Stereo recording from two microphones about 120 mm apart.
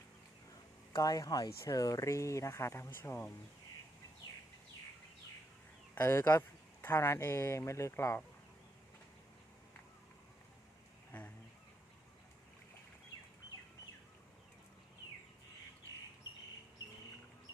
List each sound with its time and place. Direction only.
0.9 s speech: 30° left (ahead or behind)
5.9 s speech: 20° left (ahead or behind)
11.1 s a sound: 10° left (ahead or behind)